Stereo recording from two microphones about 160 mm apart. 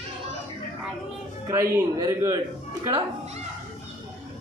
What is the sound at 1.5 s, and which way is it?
Speech, 15° right (ahead or behind).